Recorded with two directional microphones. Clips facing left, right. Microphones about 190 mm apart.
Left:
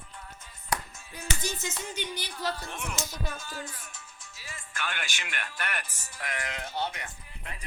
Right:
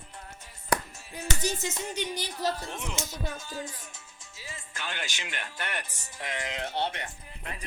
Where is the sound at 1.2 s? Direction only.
40° right (ahead or behind).